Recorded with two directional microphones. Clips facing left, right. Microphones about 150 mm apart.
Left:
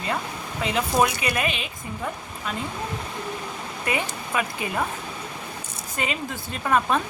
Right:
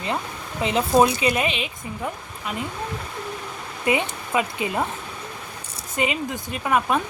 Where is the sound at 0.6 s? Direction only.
25° right (ahead or behind).